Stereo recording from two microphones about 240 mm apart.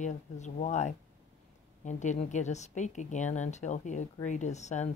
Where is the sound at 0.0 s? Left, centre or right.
Left.